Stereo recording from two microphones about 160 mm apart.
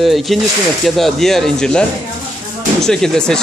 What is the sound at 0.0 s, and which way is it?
Speech, centre (ahead or behind).